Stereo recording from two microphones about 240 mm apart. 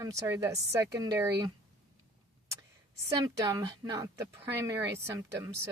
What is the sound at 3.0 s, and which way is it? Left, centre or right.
Speech, centre.